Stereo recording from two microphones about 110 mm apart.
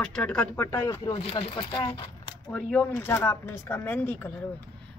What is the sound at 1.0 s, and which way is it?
Speech, 50° left (ahead or behind).